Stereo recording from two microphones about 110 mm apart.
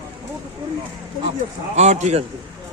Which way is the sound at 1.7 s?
90° right.